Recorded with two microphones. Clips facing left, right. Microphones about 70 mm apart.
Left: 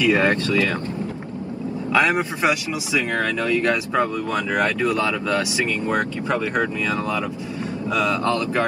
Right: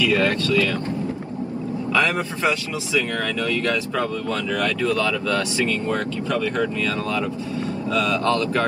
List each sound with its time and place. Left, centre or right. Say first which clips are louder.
0.0 s speech: left 2 dB; left
1.9 s speech: left 3 dB; left